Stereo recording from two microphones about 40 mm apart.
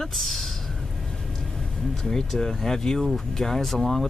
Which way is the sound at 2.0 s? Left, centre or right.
Centre.